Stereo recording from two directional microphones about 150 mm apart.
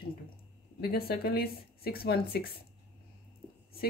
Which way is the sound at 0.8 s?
90° left.